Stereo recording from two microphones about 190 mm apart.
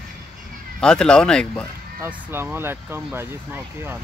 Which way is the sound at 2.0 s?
10° right (ahead or behind).